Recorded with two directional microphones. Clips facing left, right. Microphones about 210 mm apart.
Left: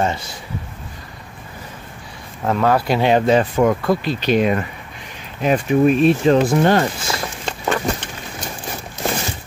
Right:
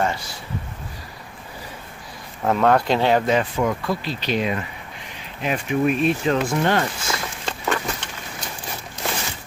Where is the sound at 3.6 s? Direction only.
55° left (ahead or behind).